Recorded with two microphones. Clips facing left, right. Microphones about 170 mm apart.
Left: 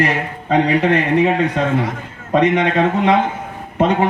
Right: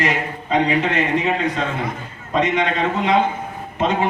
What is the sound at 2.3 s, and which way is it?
Speech, 60° left (ahead or behind).